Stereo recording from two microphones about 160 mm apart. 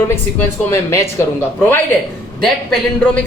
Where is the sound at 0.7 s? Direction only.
15° left (ahead or behind).